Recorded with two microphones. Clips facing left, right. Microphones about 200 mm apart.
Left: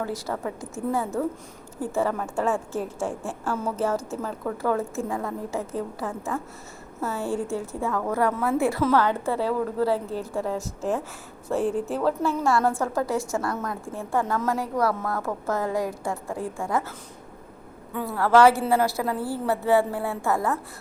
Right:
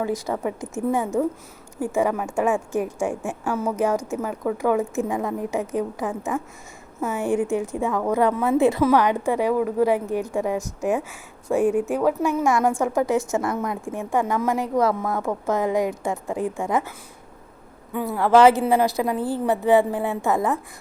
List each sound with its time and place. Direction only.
0.0 s a woman's voice: 15° right (ahead or behind)
17.9 s a woman's voice: 15° right (ahead or behind)